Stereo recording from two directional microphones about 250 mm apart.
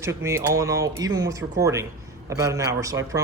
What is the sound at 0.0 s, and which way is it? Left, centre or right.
Speech, centre.